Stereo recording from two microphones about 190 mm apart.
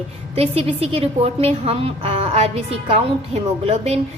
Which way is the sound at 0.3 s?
30° right (ahead or behind).